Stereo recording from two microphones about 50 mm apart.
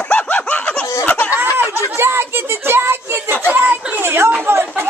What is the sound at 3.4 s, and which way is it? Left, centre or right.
Speech, right.